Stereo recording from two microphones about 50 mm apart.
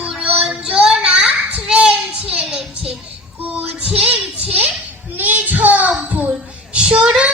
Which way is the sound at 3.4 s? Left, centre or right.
Right.